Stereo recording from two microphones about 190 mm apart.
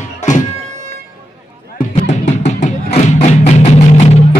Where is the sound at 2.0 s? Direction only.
40° left (ahead or behind).